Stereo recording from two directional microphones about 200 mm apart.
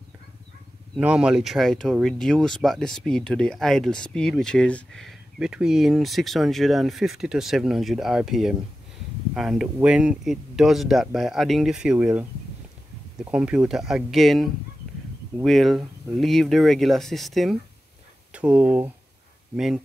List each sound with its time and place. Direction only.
0.9 s speech: 5° right (ahead or behind)